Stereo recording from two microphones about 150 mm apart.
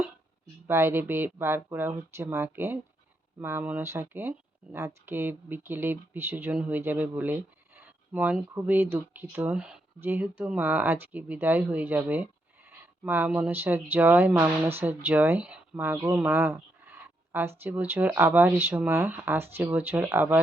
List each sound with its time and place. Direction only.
0.7 s speech: 15° right (ahead or behind)